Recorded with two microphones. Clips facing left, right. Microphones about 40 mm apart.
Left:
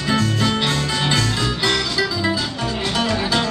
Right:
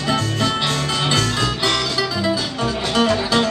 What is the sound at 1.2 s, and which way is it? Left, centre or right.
Music, right.